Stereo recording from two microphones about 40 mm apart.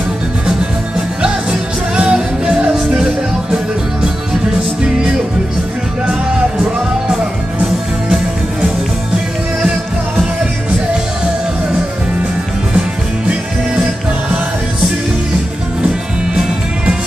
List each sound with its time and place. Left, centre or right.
0.5 s music: centre